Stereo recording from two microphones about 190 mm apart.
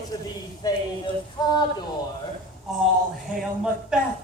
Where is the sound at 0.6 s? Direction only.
20° left (ahead or behind).